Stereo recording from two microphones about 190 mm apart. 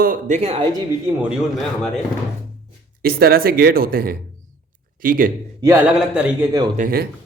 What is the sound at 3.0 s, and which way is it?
A man's voice, 50° right (ahead or behind).